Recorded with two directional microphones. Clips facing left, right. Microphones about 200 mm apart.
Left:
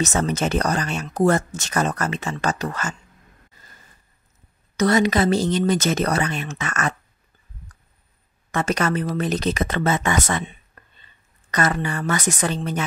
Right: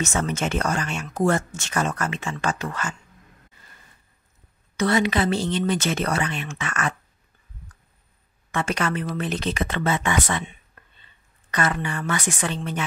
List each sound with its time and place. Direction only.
0.0 s speech: 35° left (ahead or behind)
4.7 s speech: 40° left (ahead or behind)
8.5 s speech: 40° left (ahead or behind)
10.8 s a sound: 45° left (ahead or behind)
11.5 s speech: 40° left (ahead or behind)